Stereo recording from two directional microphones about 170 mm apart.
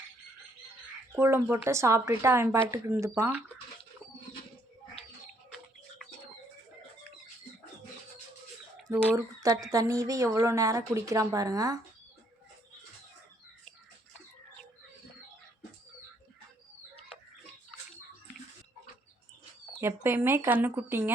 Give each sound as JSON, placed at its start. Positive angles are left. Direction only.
{"t": 1.1, "sound": "speech", "side_deg": -15}
{"t": 8.9, "sound": "a woman's voice", "side_deg": -20}
{"t": 19.8, "sound": "speech", "side_deg": -15}